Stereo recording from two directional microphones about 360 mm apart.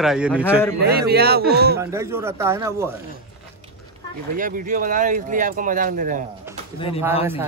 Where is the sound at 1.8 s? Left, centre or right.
Centre.